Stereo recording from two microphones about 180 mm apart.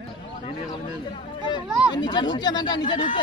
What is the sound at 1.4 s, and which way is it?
Speech, 25° left (ahead or behind).